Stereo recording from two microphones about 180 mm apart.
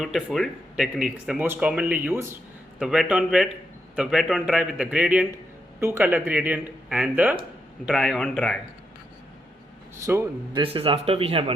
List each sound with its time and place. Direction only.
0.0 s speech: centre (ahead or behind)
2.8 s a man's voice: 5° right (ahead or behind)
10.0 s speech: 15° right (ahead or behind)
10.6 s speech: 30° right (ahead or behind)